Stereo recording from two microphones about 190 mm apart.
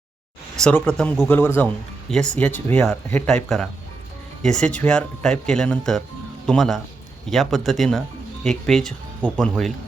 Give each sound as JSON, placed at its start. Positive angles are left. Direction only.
{"t": 0.6, "sound": "speech", "side_deg": 5}